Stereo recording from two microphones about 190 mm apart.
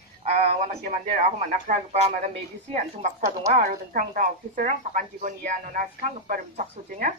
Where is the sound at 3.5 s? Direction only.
40° right (ahead or behind).